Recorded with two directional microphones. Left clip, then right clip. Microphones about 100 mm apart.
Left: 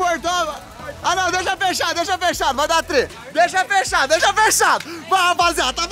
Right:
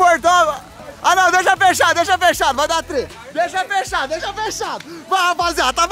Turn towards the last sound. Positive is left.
turn(degrees=-25)  # may be behind; listen again after turning